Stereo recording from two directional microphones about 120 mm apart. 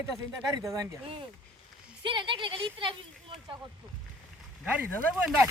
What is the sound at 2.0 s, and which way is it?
Speech, 45° right (ahead or behind).